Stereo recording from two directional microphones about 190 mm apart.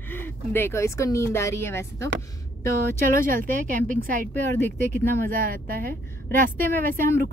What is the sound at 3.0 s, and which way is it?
A woman's voice, 45° right (ahead or behind).